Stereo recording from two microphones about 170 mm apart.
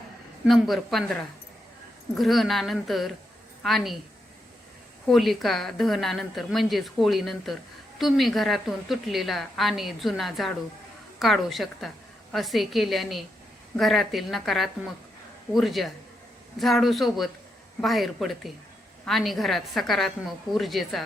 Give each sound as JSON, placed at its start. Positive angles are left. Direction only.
{"t": 0.4, "sound": "a woman's voice", "side_deg": 0}
{"t": 5.0, "sound": "a woman's voice", "side_deg": 0}